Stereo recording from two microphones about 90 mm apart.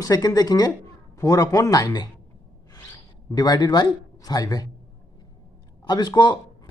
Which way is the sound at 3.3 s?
45° left (ahead or behind).